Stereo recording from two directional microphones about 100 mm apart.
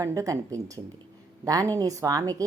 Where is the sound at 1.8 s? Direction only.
35° right (ahead or behind).